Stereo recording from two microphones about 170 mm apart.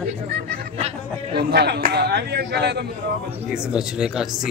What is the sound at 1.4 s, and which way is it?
A man's voice, 70° right (ahead or behind).